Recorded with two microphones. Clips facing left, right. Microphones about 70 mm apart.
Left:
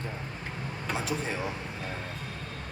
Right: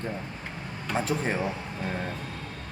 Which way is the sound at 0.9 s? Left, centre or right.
Right.